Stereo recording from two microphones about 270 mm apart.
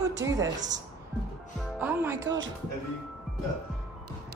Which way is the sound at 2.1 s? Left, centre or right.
Right.